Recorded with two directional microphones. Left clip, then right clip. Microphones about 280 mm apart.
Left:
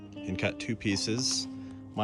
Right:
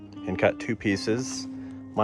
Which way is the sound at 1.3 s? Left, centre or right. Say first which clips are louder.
Even; centre.